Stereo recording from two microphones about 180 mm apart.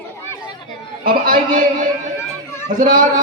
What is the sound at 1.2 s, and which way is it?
A woman's voice, 50° right (ahead or behind).